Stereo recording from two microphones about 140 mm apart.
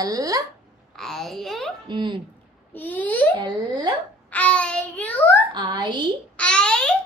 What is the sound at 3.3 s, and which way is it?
Speech, 30° right (ahead or behind).